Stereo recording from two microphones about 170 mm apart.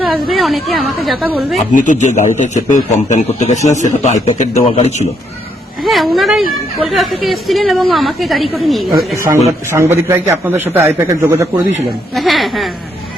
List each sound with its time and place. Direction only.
0.0 s a woman's voice: centre (ahead or behind)
1.7 s a man's voice: 50° left (ahead or behind)
5.8 s a woman's voice: centre (ahead or behind)
9.6 s a man's voice: 15° right (ahead or behind)
12.1 s a woman's voice: centre (ahead or behind)